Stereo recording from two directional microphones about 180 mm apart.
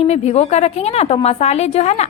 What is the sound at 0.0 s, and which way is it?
A woman's voice, 35° left (ahead or behind).